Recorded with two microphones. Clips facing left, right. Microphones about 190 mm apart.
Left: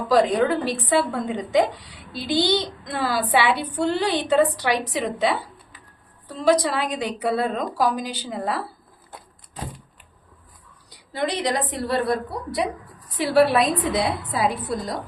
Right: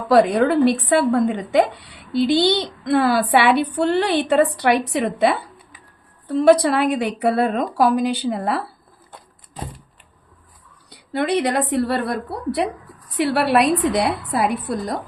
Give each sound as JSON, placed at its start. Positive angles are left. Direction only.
{"t": 0.1, "sound": "a woman's voice", "side_deg": -65}
{"t": 10.8, "sound": "a woman's voice", "side_deg": -60}